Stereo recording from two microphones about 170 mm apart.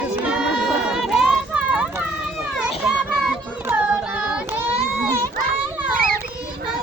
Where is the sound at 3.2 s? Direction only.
10° right (ahead or behind).